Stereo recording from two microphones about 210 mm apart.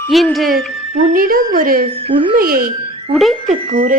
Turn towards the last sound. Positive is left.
turn(degrees=-40)  # may be behind; listen again after turning